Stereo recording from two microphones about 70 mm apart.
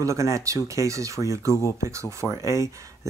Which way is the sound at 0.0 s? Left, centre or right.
Right.